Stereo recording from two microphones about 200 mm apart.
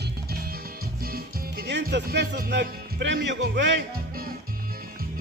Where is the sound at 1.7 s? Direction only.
60° right (ahead or behind).